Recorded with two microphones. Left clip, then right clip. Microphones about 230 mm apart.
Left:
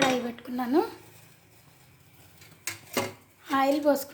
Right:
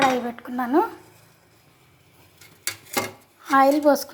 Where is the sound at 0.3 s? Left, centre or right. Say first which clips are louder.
Right 5 dB; centre.